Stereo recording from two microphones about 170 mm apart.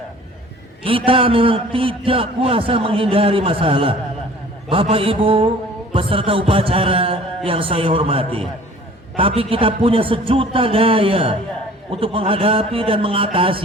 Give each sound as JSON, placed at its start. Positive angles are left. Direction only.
{"t": 0.9, "sound": "a man's voice", "side_deg": -30}